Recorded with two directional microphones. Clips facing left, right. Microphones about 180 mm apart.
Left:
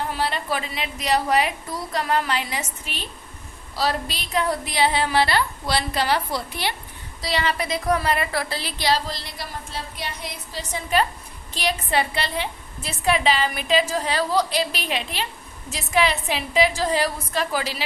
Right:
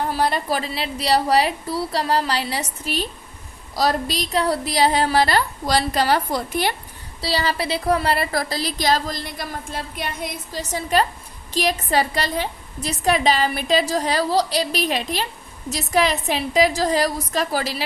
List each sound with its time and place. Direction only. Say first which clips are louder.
0.1 s a woman's voice: right 4 dB; 40° right (ahead or behind)
7.2 s a woman's voice: right 2 dB; 35° right (ahead or behind)